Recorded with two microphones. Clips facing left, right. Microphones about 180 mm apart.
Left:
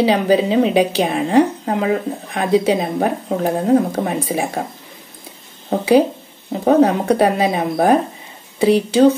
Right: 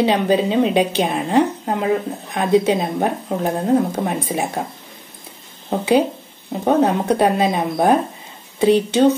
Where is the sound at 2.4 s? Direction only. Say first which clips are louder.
Even; 10° left (ahead or behind).